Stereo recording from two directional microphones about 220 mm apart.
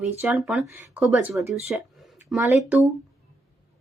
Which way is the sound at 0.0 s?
5° right (ahead or behind).